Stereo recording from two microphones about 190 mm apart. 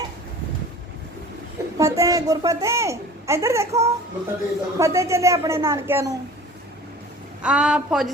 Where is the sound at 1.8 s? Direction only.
15° right (ahead or behind).